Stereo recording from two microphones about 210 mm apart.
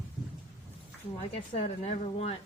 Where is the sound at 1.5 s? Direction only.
35° left (ahead or behind).